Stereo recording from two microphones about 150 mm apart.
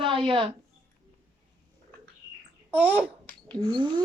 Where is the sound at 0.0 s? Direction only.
35° right (ahead or behind).